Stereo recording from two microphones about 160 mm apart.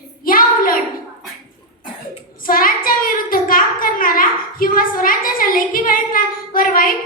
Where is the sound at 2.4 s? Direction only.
65° left (ahead or behind).